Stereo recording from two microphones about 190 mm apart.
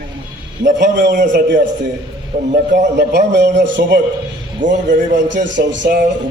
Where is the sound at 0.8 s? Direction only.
65° right (ahead or behind).